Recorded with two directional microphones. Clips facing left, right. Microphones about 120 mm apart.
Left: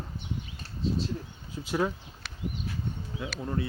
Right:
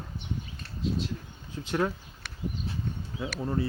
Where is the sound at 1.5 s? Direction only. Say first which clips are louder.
Even; 10° left (ahead or behind).